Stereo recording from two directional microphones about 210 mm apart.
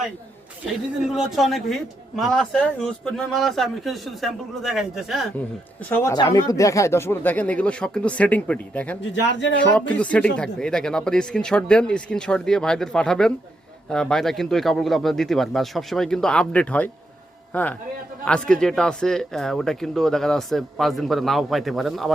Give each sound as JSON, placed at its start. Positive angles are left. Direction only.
{"t": 1.0, "sound": "speech", "side_deg": 0}
{"t": 5.9, "sound": "speech", "side_deg": 15}
{"t": 9.2, "sound": "speech", "side_deg": 60}
{"t": 9.9, "sound": "a man's voice", "side_deg": 5}